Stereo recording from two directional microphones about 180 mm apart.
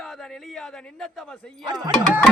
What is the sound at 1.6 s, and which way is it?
Speech, 20° right (ahead or behind).